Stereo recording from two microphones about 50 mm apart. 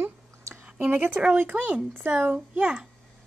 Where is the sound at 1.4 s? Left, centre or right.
Right.